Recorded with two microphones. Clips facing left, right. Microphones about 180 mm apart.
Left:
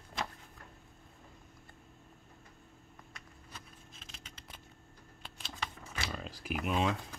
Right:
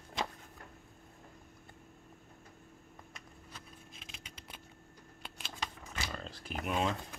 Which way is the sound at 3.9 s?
10° right (ahead or behind).